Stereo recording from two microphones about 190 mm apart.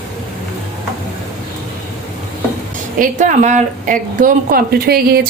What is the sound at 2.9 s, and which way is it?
Speech, 40° right (ahead or behind).